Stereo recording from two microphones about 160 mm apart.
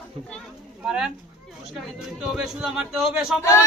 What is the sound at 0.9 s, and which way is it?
Speech, 5° right (ahead or behind).